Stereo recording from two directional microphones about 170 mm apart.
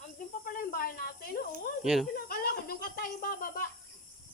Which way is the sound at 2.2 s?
60° left (ahead or behind).